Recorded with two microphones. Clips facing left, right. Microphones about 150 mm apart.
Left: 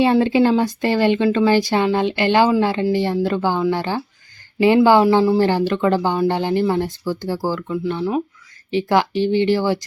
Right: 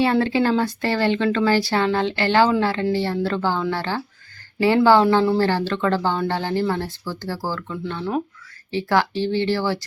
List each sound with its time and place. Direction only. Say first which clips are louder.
0.0 s speech: left 4 dB; 15° left (ahead or behind)